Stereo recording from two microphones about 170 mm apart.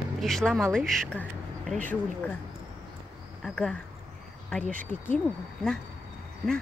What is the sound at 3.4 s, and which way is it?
Speech, 5° left (ahead or behind).